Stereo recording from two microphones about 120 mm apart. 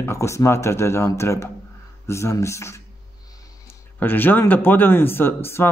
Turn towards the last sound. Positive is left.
turn(degrees=20)  # may be behind; listen again after turning